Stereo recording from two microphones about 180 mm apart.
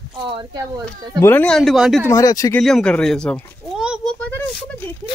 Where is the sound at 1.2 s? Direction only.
10° left (ahead or behind).